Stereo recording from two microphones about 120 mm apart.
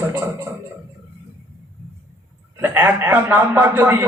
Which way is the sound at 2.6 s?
15° right (ahead or behind).